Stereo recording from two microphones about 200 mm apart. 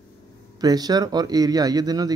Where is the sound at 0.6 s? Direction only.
20° right (ahead or behind).